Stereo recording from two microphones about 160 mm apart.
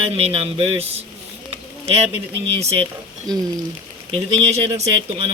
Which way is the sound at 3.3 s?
25° right (ahead or behind).